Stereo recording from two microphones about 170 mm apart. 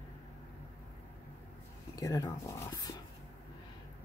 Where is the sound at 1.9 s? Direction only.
20° left (ahead or behind).